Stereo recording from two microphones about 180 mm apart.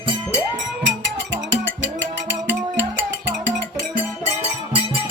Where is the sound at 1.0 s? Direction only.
85° right.